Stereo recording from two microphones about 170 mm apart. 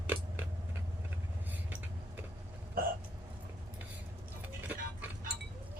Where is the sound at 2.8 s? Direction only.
60° right (ahead or behind).